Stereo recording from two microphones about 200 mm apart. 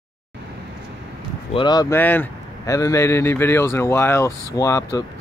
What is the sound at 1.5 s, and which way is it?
Speech, 20° left (ahead or behind).